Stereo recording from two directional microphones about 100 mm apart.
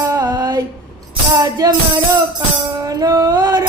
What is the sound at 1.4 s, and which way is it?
Music, 40° right (ahead or behind).